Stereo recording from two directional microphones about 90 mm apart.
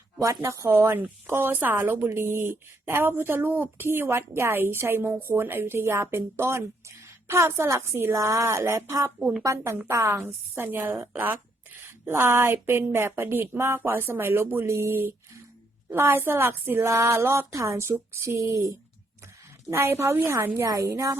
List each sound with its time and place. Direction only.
0.2 s a woman's voice: 35° right (ahead or behind)
9.1 s speech: 10° right (ahead or behind)
9.4 s a woman's voice: 35° right (ahead or behind)